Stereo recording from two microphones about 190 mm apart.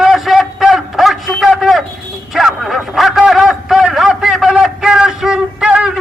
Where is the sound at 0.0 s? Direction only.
Centre (ahead or behind).